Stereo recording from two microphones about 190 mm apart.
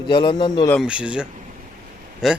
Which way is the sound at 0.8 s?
5° right (ahead or behind).